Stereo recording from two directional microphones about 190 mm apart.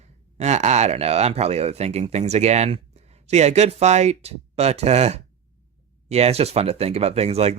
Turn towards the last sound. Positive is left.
turn(degrees=-35)  # may be behind; listen again after turning